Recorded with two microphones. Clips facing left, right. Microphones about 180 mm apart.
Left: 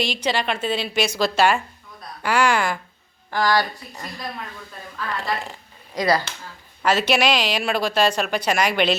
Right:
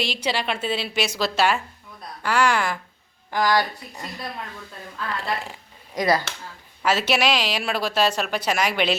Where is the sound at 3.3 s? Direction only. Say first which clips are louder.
Left 1 dB; 20° right (ahead or behind).